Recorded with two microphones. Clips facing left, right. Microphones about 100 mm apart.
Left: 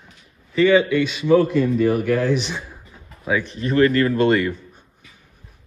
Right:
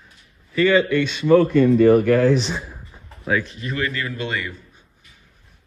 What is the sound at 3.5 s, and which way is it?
Speech, 35° left (ahead or behind).